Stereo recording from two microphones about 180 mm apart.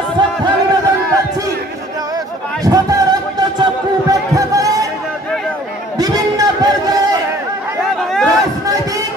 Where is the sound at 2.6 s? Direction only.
20° right (ahead or behind).